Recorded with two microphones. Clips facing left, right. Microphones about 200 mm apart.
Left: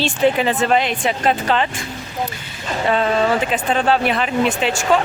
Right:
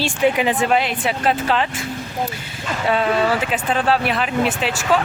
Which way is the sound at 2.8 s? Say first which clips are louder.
Left 1 dB; 5° right (ahead or behind).